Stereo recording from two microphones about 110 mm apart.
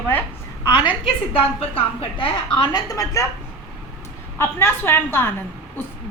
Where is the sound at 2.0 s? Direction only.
55° left (ahead or behind).